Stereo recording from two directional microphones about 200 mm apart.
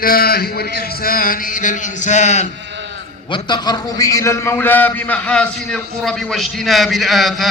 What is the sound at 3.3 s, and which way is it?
A man's voice, 25° left (ahead or behind).